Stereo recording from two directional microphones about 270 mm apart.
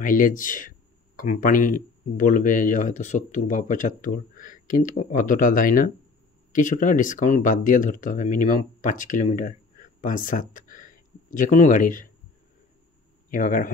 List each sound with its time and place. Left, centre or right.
0.0 s speech: left
13.3 s speech: left